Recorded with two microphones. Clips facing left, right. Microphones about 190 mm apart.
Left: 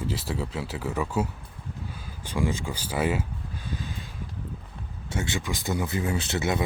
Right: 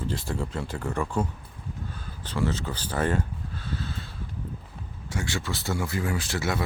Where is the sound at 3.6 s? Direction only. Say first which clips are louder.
Right 1 dB; 15° left (ahead or behind).